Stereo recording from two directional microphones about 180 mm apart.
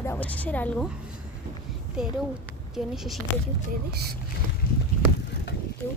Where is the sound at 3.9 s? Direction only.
60° right (ahead or behind).